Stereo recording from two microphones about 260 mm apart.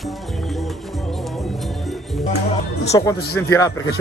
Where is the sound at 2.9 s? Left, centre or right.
Centre.